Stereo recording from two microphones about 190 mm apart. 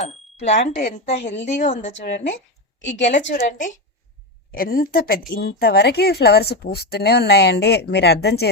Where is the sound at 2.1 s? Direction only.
70° left (ahead or behind).